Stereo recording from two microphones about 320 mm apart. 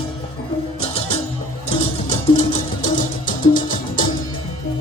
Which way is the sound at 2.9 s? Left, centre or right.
Centre.